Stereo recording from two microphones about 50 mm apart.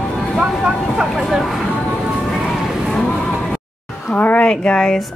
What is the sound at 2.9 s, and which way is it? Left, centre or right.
Music, centre.